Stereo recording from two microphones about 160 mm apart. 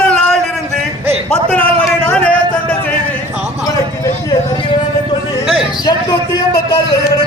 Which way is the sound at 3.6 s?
25° left (ahead or behind).